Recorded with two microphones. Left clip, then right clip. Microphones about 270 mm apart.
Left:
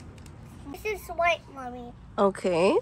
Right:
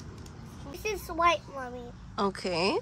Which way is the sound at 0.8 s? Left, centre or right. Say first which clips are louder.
Even; centre.